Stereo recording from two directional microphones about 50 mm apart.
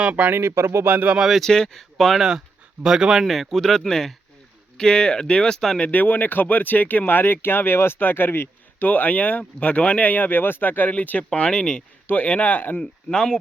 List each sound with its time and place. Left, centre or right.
0.0 s speech: right
0.3 s speech: right
0.9 s speech: right
1.4 s speech: centre
2.1 s speech: centre
5.8 s speech: left
8.8 s speech: left
11.3 s speech: centre
12.0 s speech: left
12.8 s speech: centre